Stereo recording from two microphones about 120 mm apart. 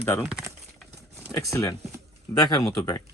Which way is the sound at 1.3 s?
25° left (ahead or behind).